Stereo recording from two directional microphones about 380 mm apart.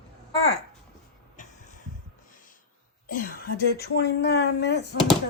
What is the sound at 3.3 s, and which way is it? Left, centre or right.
Speech, left.